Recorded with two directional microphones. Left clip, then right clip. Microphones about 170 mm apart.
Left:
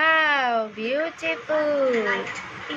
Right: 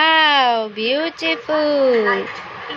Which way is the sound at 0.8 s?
35° right (ahead or behind).